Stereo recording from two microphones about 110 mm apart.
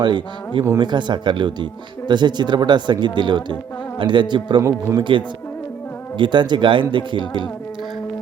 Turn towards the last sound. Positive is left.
turn(degrees=-45)  # may be behind; listen again after turning